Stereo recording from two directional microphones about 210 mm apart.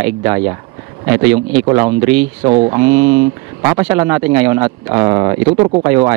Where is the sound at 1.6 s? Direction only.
20° right (ahead or behind).